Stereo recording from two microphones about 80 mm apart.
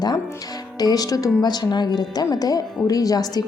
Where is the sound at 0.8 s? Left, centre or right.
Left.